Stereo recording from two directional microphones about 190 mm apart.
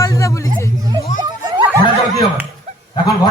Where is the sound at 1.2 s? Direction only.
20° right (ahead or behind).